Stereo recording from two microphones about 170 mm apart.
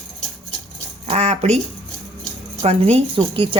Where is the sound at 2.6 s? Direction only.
35° right (ahead or behind).